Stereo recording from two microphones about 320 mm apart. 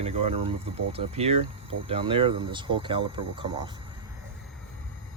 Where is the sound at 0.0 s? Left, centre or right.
Centre.